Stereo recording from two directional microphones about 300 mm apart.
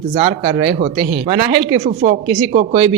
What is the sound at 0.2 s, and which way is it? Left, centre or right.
Speech, centre.